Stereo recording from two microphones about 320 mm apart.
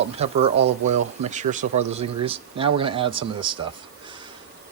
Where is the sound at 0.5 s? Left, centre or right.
Right.